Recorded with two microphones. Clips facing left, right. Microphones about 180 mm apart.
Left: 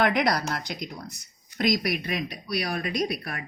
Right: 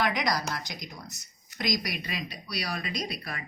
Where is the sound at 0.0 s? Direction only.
60° left (ahead or behind).